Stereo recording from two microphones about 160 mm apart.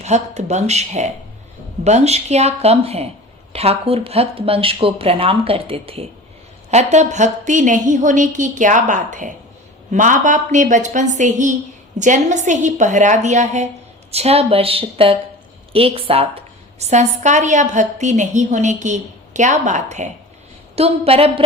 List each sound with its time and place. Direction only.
0.0 s a woman's voice: 45° right (ahead or behind)